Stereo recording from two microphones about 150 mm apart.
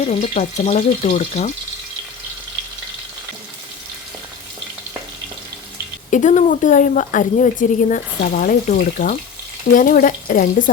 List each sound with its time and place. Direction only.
0.0 s speech: 50° left (ahead or behind)
6.1 s a woman's voice: 55° left (ahead or behind)